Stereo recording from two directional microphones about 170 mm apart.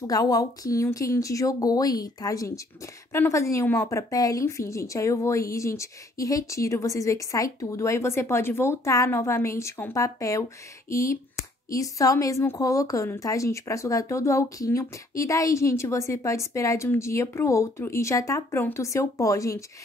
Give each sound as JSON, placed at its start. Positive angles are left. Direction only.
{"t": 0.0, "sound": "a woman's voice", "side_deg": 20}